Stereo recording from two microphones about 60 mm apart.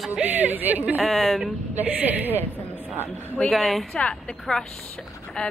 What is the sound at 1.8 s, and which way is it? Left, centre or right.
Speech, right.